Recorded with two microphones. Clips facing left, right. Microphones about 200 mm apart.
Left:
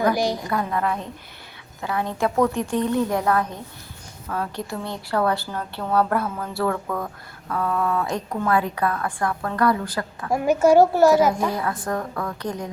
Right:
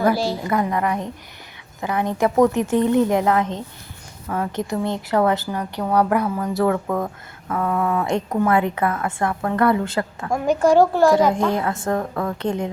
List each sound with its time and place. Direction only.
0.0 s a woman's voice: 15° left (ahead or behind)
0.5 s a woman's voice: 15° right (ahead or behind)
10.2 s a child's voice: 10° left (ahead or behind)
11.5 s speech: 25° right (ahead or behind)